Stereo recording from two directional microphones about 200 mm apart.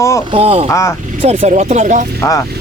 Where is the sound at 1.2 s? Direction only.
30° right (ahead or behind).